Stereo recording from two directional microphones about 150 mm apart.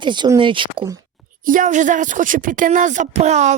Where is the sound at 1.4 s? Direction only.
60° right (ahead or behind).